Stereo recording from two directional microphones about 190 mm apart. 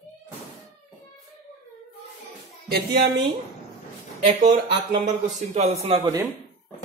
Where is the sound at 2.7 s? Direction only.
55° right (ahead or behind).